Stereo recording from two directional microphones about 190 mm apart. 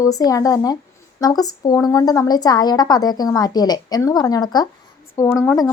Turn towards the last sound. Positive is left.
turn(degrees=15)  # may be behind; listen again after turning